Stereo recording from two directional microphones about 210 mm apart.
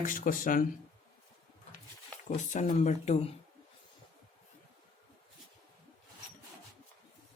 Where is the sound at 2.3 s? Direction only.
35° left (ahead or behind).